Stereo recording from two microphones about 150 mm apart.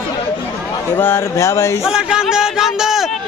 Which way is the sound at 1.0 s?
15° left (ahead or behind).